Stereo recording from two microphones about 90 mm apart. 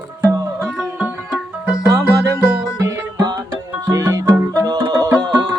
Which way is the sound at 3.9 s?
40° right (ahead or behind).